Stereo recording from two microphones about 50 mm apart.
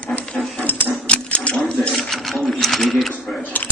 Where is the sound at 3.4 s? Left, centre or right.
Left.